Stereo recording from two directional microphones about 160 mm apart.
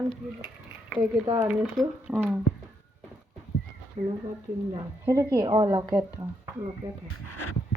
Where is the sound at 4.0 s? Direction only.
40° right (ahead or behind).